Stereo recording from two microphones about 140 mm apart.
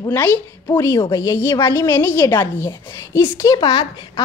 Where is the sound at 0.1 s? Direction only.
15° left (ahead or behind).